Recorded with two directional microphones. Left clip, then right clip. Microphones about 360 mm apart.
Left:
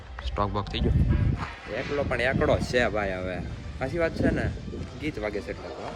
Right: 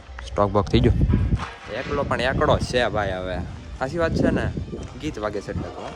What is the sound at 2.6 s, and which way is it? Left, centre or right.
Speech, centre.